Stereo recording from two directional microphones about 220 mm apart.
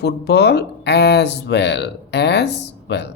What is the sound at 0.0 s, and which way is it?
Speech, 50° left (ahead or behind).